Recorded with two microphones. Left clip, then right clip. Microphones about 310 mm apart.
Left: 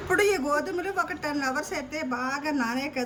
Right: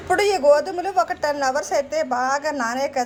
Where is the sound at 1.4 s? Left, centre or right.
Right.